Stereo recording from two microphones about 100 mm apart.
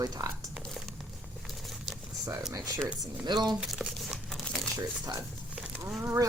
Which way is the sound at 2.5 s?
35° right (ahead or behind).